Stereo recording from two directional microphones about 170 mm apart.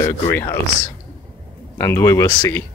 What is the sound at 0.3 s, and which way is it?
Speech, 15° left (ahead or behind).